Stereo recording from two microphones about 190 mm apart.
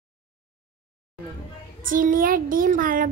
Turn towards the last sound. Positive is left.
turn(degrees=-45)  # may be behind; listen again after turning